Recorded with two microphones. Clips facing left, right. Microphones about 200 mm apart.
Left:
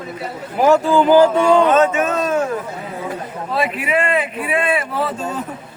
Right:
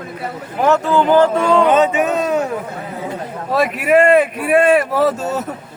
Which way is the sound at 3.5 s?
45° right (ahead or behind).